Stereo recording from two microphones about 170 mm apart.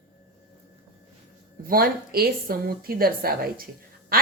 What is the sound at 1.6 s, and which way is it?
A woman's voice, 60° right (ahead or behind).